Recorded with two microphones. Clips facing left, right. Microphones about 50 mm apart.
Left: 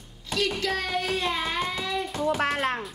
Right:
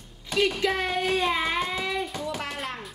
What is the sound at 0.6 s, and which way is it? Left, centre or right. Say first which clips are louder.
Child singing: right 2 dB; right.